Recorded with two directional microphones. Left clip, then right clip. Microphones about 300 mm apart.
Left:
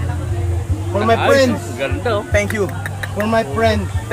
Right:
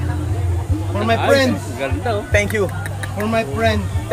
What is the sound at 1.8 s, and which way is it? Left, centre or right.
Speech, centre.